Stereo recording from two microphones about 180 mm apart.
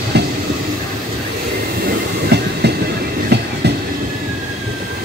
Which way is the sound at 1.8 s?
65° right (ahead or behind).